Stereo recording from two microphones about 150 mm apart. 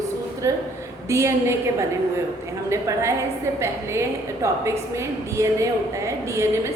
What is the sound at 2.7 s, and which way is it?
A woman's voice, 20° right (ahead or behind).